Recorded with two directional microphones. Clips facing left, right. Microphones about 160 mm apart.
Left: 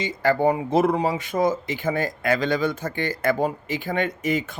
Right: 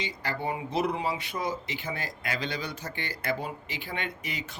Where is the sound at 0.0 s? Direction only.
45° left (ahead or behind).